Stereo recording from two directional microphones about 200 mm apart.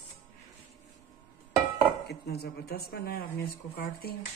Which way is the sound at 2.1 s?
55° left (ahead or behind).